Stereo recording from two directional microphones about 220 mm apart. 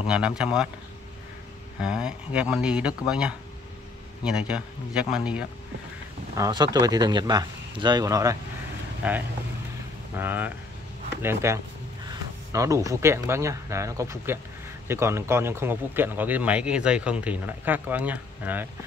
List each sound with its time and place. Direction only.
0.0 s speech: 5° right (ahead or behind)
1.8 s speech: 5° right (ahead or behind)
6.3 s a man's voice: 15° right (ahead or behind)